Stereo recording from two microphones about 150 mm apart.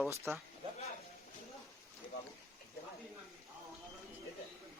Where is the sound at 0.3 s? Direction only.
20° right (ahead or behind).